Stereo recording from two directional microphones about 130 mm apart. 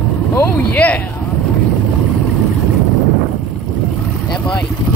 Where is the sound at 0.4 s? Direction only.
10° left (ahead or behind).